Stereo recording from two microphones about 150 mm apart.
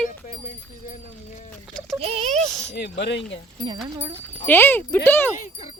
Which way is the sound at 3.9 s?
35° right (ahead or behind).